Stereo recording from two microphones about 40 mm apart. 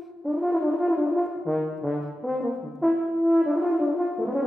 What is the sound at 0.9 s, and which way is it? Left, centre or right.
French horn, centre.